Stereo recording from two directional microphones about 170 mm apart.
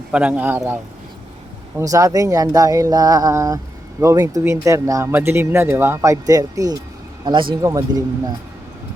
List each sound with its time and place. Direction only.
0.1 s speech: 10° right (ahead or behind)